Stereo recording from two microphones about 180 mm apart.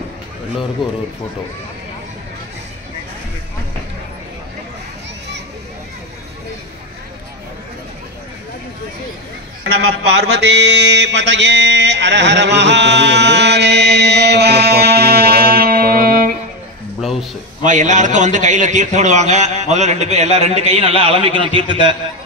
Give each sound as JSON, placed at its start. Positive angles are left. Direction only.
{"t": 9.7, "sound": "mantra", "side_deg": -70}
{"t": 17.0, "sound": "a sound", "side_deg": 0}
{"t": 17.6, "sound": "a man's voice", "side_deg": -45}